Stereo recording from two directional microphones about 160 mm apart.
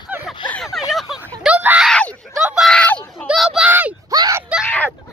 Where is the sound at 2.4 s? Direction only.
Centre (ahead or behind).